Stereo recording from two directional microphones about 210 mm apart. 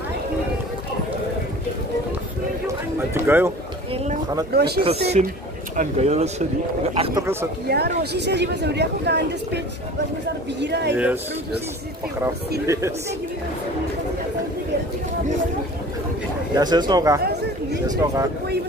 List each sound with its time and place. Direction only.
3.2 s speech: 10° right (ahead or behind)
4.6 s a woman's voice: 50° right (ahead or behind)
5.2 s speech: 35° right (ahead or behind)
7.6 s a woman's voice: 50° right (ahead or behind)
10.6 s speech: 55° right (ahead or behind)
12.2 s speech: 15° right (ahead or behind)
16.5 s speech: 20° right (ahead or behind)